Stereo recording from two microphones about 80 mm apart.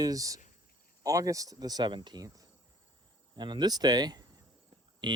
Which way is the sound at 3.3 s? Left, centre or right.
Right.